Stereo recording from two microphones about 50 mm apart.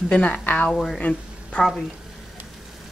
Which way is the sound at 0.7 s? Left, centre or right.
Centre.